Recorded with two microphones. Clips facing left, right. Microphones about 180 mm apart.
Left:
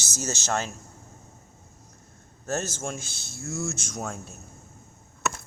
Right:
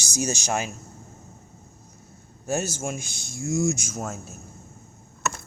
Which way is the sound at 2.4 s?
10° right (ahead or behind).